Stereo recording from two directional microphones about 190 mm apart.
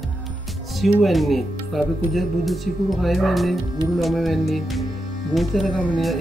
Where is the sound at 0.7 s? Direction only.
Centre (ahead or behind).